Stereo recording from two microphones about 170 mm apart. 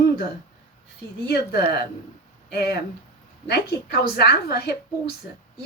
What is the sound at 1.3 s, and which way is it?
Speech, 70° left (ahead or behind).